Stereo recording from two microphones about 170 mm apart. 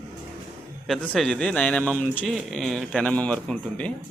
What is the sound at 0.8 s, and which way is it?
A man's voice, centre (ahead or behind).